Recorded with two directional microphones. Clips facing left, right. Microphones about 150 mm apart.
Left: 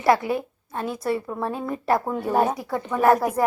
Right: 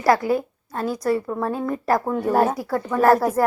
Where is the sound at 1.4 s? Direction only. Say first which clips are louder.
Right 3 dB; 25° left (ahead or behind).